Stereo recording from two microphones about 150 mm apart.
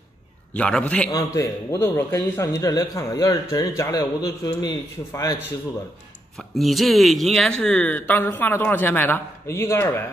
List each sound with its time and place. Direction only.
0.6 s speech: 5° left (ahead or behind)
1.1 s a man's voice: 20° left (ahead or behind)
6.3 s speech: centre (ahead or behind); by 10.0 s 15° left (ahead or behind)